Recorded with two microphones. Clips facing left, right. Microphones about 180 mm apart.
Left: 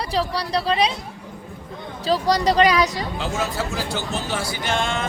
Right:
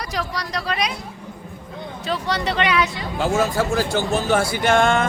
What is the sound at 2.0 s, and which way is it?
Speech, 35° left (ahead or behind).